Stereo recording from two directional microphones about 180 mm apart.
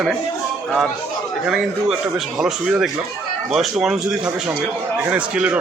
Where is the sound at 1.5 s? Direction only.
5° right (ahead or behind).